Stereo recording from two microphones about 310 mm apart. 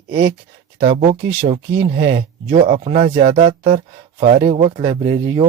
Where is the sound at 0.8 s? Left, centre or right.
Right.